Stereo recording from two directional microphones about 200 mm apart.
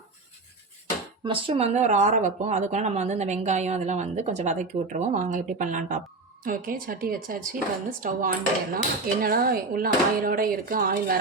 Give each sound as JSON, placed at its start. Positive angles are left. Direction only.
{"t": 1.2, "sound": "speech", "side_deg": -25}